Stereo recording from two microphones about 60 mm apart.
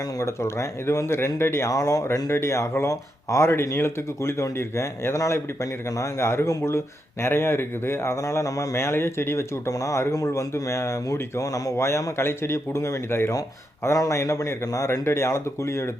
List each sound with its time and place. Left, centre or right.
0.2 s speech: left
1.7 s speech: left
2.3 s speech: left
3.4 s speech: left
8.1 s speech: left
11.9 s speech: left
13.9 s speech: left